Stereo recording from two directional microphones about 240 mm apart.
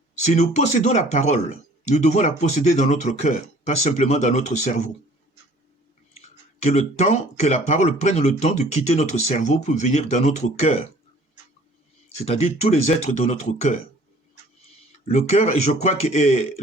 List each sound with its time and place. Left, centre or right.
0.2 s speech: left
6.1 s speech: left
12.1 s speech: left
15.0 s speech: left